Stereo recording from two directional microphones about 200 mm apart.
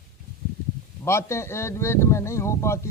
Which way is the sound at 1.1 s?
15° left (ahead or behind).